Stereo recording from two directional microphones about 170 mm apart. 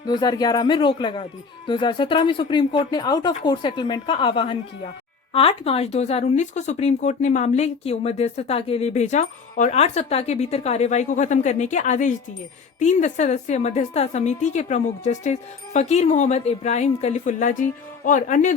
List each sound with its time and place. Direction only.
0.0 s a woman's voice: 25° left (ahead or behind); by 18.5 s 50° left (ahead or behind)